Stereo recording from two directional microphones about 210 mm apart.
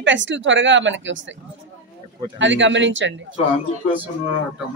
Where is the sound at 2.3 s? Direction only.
60° right (ahead or behind).